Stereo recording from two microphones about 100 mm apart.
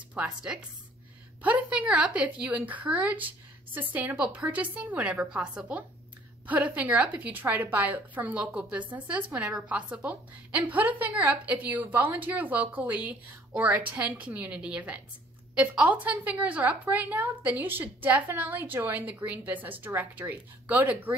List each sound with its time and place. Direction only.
0.1 s a woman's voice: 10° right (ahead or behind)